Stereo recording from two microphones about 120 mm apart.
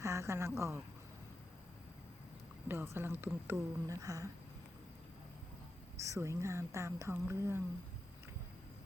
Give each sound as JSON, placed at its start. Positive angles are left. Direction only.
{"t": 0.0, "sound": "a woman's voice", "side_deg": -25}
{"t": 2.6, "sound": "a woman's voice", "side_deg": -20}
{"t": 3.8, "sound": "a woman's voice", "side_deg": -30}
{"t": 6.0, "sound": "a woman's voice", "side_deg": -25}